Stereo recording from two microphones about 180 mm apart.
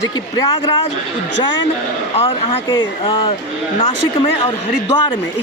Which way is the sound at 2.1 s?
30° left (ahead or behind).